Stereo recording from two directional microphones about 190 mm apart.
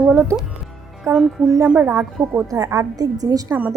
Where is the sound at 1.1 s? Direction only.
15° right (ahead or behind).